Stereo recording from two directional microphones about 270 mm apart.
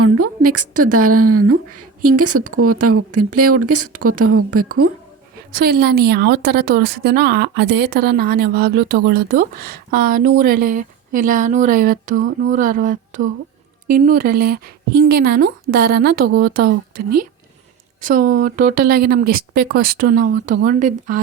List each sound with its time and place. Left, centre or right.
0.0 s a woman's voice: right
5.5 s a woman's voice: right